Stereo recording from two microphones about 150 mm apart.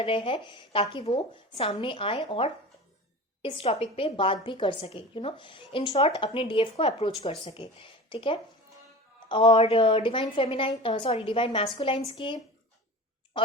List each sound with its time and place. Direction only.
0.0 s a woman's voice: 35° left (ahead or behind)